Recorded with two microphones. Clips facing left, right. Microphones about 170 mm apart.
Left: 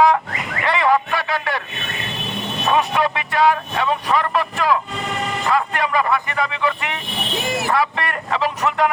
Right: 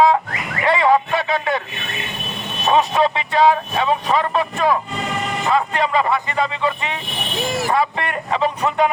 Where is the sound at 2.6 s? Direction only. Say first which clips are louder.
Right 3 dB; 20° right (ahead or behind).